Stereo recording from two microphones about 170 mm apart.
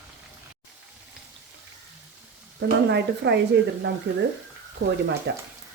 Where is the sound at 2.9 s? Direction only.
80° right.